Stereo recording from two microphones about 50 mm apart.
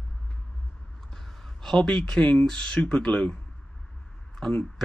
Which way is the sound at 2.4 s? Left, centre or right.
Centre.